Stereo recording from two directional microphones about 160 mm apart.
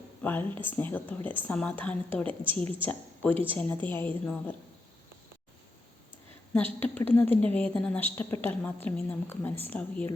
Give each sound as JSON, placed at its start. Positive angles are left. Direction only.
{"t": 0.2, "sound": "a sound", "side_deg": 10}
{"t": 0.6, "sound": "a woman's voice", "side_deg": 15}
{"t": 3.3, "sound": "a woman's voice", "side_deg": -35}
{"t": 3.6, "sound": "a woman's voice", "side_deg": 10}
{"t": 6.7, "sound": "a woman's voice", "side_deg": 10}